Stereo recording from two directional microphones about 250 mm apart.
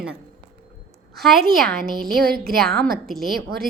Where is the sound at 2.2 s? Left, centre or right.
Right.